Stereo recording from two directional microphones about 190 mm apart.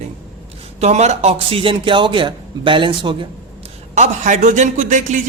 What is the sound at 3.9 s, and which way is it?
Speech, 40° right (ahead or behind).